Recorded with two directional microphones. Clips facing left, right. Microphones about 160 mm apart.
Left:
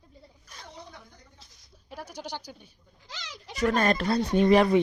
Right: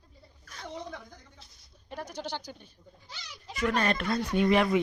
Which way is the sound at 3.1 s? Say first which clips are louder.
Left 4 dB; 90° left.